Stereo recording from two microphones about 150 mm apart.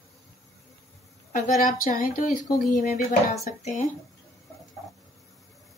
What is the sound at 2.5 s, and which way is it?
Speech, 75° left (ahead or behind).